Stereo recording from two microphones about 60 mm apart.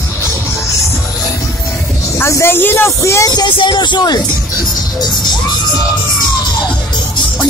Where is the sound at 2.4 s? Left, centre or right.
Left.